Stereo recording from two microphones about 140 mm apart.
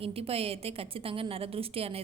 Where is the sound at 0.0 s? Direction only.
45° right (ahead or behind).